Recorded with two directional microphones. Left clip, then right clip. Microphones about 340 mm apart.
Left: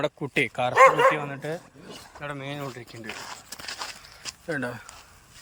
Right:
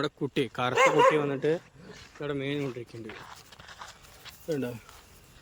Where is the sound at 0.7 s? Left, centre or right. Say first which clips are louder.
Left 5 dB; centre.